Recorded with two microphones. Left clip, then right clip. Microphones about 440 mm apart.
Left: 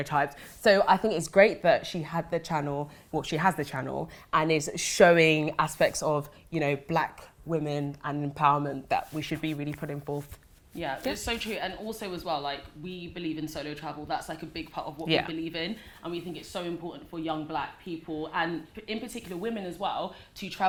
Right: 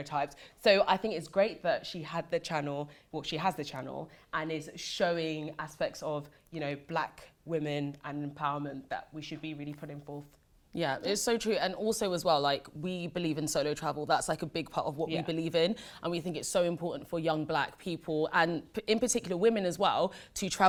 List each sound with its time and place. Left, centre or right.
0.0 s speech: centre
7.5 s speech: centre
8.2 s speech: left
10.8 s a woman's voice: right
15.0 s speech: centre
15.3 s a woman's voice: right